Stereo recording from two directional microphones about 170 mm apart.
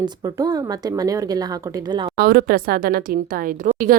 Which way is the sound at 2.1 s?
60° right (ahead or behind).